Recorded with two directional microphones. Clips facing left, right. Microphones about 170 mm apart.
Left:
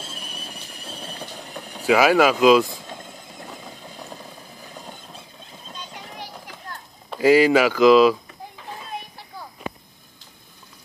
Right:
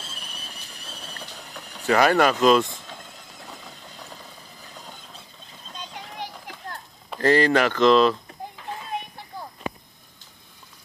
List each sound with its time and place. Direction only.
1.0 s vehicle: 55° left (ahead or behind)
1.9 s speech: 5° left (ahead or behind)
7.1 s speech: 5° left (ahead or behind)